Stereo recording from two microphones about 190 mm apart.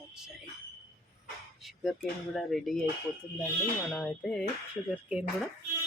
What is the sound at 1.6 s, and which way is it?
Speech, centre (ahead or behind).